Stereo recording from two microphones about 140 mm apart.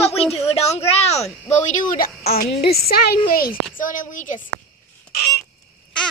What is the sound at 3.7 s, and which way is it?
Speech, 70° left (ahead or behind).